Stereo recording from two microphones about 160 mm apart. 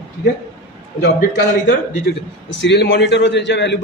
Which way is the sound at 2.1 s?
80° left.